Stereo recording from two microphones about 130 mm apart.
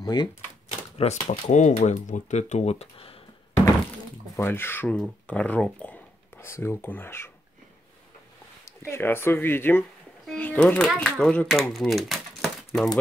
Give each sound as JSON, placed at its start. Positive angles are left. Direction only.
{"t": 0.0, "sound": "speech", "side_deg": 30}
{"t": 0.7, "sound": "typewriter", "side_deg": 60}
{"t": 1.2, "sound": "speech", "side_deg": 65}
{"t": 4.4, "sound": "speech", "side_deg": 15}
{"t": 8.6, "sound": "speech", "side_deg": 20}